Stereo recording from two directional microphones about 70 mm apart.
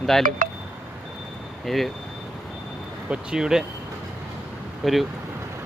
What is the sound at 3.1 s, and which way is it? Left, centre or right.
Speech, centre.